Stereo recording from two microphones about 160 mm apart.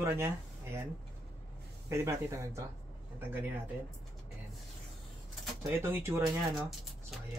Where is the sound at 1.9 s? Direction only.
20° right (ahead or behind).